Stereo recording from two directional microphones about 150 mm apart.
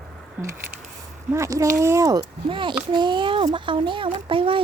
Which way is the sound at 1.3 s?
20° right (ahead or behind).